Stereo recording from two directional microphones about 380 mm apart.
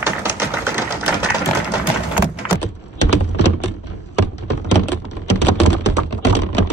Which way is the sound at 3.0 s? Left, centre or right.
Left.